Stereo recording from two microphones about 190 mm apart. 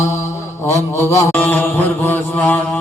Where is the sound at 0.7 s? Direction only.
15° left (ahead or behind).